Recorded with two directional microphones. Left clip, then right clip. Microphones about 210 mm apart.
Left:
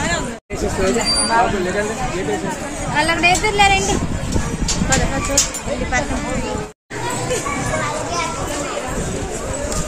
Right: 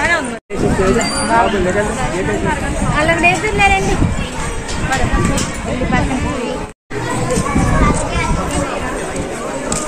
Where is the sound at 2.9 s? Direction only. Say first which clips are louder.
Right 2 dB; 40° left (ahead or behind).